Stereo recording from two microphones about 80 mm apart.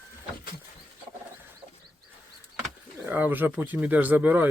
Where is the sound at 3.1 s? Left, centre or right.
Right.